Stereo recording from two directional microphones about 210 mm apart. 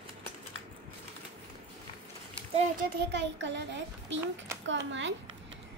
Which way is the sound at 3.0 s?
55° right (ahead or behind).